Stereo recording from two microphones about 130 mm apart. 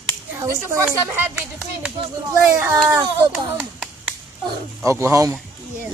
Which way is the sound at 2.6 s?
20° right (ahead or behind).